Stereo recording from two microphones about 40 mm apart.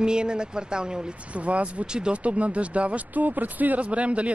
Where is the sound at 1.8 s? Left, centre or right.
Right.